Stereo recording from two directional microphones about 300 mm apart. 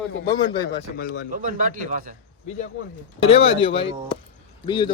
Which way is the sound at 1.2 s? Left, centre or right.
Right.